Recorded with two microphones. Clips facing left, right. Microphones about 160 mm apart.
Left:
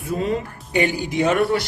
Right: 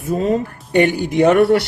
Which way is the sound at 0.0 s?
45° right (ahead or behind).